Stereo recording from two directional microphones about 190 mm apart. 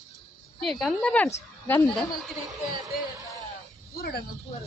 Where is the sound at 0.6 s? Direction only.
Centre (ahead or behind).